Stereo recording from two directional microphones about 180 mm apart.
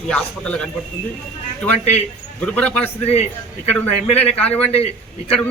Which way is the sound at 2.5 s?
10° left (ahead or behind).